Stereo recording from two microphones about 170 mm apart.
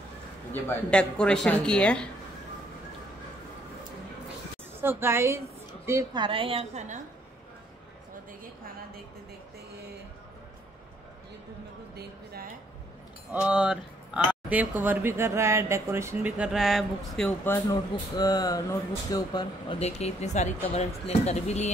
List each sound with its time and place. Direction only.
0.5 s speech: 10° left (ahead or behind)
4.8 s speech: 15° right (ahead or behind)
6.1 s a woman's voice: 30° right (ahead or behind)
11.9 s a sound: 65° right (ahead or behind)
13.3 s speech: 5° right (ahead or behind)
17.6 s speech: 20° left (ahead or behind)
19.8 s speech: 40° left (ahead or behind)